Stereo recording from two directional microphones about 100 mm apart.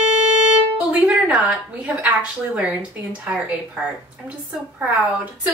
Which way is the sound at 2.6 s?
15° right (ahead or behind).